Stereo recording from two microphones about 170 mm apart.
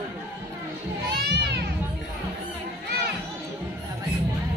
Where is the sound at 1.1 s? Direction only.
75° right (ahead or behind).